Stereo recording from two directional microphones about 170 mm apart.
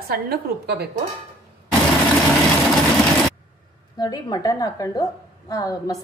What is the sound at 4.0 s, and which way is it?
A woman's voice, 20° left (ahead or behind).